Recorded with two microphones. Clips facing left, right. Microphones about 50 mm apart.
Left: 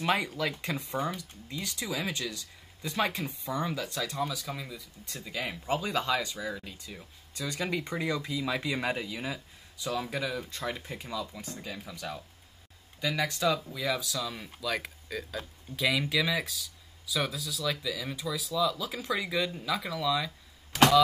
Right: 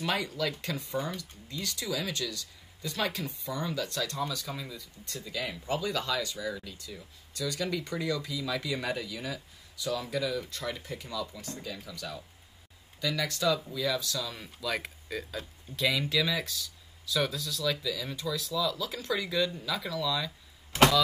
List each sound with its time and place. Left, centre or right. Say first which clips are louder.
0.0 s speech: left 2 dB; left